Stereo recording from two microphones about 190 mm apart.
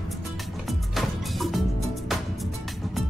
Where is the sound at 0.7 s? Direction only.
Centre (ahead or behind).